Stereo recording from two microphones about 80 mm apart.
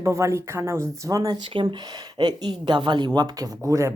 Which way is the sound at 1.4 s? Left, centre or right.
Right.